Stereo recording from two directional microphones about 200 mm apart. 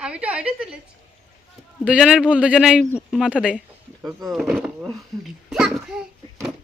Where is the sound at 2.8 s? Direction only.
10° left (ahead or behind).